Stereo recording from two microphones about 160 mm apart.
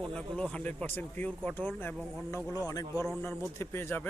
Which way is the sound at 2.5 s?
25° left (ahead or behind).